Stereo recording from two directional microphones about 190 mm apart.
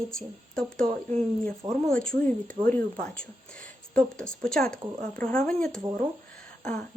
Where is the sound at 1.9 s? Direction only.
5° left (ahead or behind).